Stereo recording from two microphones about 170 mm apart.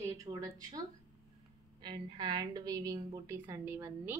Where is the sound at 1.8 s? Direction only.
25° right (ahead or behind).